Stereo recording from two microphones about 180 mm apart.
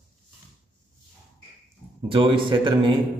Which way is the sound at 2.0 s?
30° right (ahead or behind).